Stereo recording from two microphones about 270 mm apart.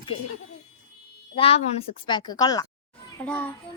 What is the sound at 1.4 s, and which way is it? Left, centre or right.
A child's voice, left.